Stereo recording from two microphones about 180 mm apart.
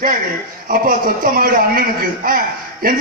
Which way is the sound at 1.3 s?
55° right (ahead or behind).